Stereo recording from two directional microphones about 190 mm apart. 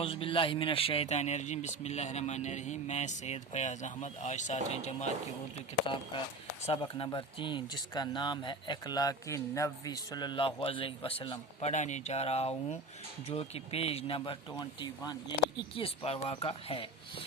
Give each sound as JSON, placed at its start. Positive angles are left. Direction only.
{"t": 0.0, "sound": "speech", "side_deg": 30}
{"t": 11.7, "sound": "speech", "side_deg": 40}